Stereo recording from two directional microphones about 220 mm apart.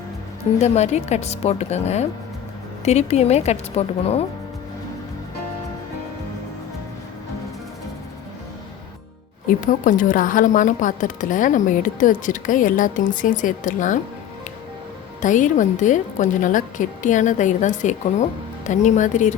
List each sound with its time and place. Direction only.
0.6 s a woman's voice: 30° left (ahead or behind)
9.6 s speech: 35° left (ahead or behind)
15.2 s speech: 35° left (ahead or behind)